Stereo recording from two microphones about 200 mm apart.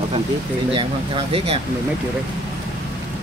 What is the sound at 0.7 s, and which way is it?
Speech, 25° right (ahead or behind).